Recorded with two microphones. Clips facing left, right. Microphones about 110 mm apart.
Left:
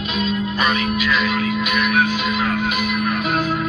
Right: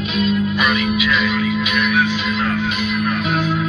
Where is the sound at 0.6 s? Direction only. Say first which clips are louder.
Right 1 dB; 35° left (ahead or behind).